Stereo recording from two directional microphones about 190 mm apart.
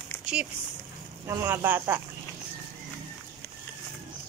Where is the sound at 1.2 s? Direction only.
15° right (ahead or behind).